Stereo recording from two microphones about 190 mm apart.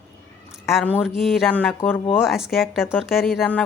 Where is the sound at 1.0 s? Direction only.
Centre (ahead or behind).